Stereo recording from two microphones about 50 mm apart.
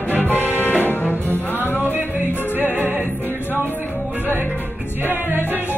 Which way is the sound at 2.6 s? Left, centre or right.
Right.